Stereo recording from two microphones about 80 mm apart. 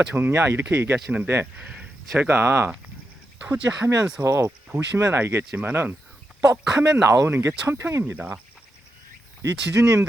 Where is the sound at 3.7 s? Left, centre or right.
Centre.